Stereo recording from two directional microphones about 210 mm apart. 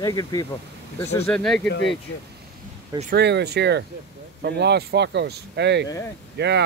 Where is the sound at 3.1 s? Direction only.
55° right (ahead or behind).